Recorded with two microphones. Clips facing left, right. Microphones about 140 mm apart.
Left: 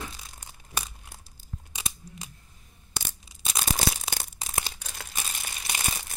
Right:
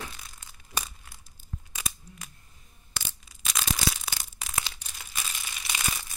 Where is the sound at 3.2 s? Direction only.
30° left (ahead or behind).